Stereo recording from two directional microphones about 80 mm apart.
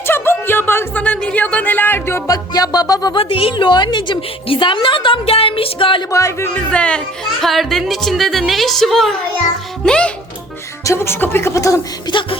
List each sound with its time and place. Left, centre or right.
0.1 s speech: left
2.2 s speech: left
5.8 s a sound: left
6.1 s speech: left
6.5 s speech: centre
7.4 s a woman's voice: centre
10.8 s speech: left
12.0 s a sound: left